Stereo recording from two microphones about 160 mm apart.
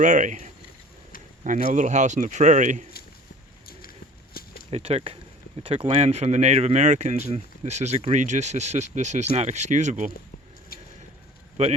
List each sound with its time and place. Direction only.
0.0 s speech: 55° right (ahead or behind)
3.7 s a sound: 65° left (ahead or behind)
4.7 s speech: 40° right (ahead or behind)
10.7 s vehicle: 70° left (ahead or behind)
11.6 s speech: 40° right (ahead or behind)